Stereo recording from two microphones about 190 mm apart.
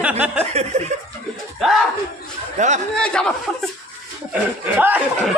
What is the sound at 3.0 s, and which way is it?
Speech, 5° left (ahead or behind).